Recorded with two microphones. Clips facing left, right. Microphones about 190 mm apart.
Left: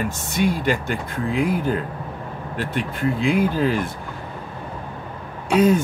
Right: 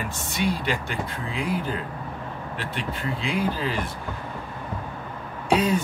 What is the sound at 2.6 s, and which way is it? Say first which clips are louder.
Speech: left 8 dB; 50° left (ahead or behind).